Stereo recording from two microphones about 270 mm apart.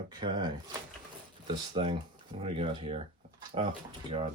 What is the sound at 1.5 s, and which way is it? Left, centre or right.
Speech, centre.